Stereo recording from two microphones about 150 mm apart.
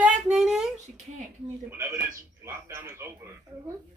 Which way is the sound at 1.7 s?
20° right (ahead or behind).